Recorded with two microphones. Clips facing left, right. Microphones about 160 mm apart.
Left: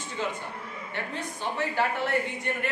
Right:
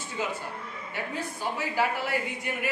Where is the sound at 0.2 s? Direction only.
10° right (ahead or behind).